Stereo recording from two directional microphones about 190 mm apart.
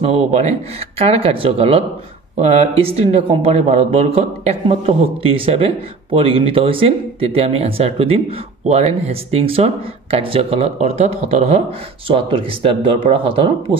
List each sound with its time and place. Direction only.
0.0 s speech: 35° right (ahead or behind)